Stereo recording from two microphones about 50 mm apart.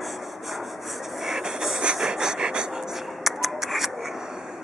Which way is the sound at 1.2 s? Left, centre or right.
Centre.